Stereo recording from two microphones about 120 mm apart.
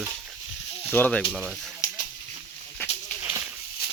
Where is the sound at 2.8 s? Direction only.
20° left (ahead or behind).